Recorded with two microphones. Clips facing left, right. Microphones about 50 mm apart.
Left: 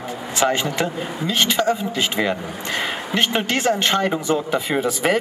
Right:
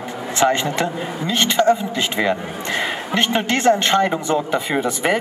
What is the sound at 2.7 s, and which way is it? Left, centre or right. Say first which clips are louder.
Speech: right 2 dB; right.